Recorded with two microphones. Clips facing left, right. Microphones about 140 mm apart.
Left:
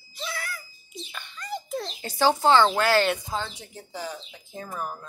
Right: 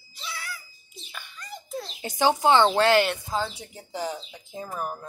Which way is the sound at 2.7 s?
30° right (ahead or behind).